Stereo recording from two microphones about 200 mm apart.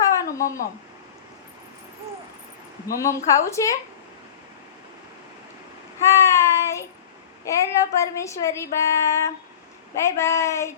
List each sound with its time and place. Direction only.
0.0 s a sound: 15° left (ahead or behind)
2.8 s a woman's voice: 15° left (ahead or behind)
6.1 s child singing: 15° left (ahead or behind)
7.4 s a woman's voice: 15° left (ahead or behind)